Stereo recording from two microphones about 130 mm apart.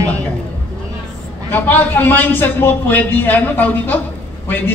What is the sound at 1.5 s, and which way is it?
A man's voice, 15° left (ahead or behind).